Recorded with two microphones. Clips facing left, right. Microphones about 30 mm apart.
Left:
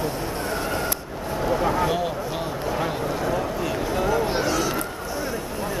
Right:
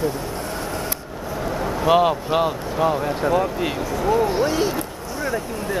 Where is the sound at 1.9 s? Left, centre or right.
Right.